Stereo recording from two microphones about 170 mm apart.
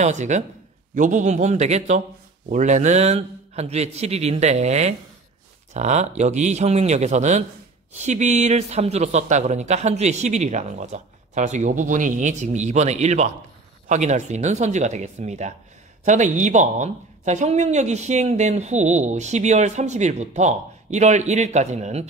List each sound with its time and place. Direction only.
0.0 s a man's voice: 45° right (ahead or behind)